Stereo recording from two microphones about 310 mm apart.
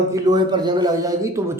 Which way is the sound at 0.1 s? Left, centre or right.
Centre.